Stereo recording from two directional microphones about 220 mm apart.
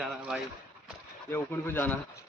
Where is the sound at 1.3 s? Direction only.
10° left (ahead or behind).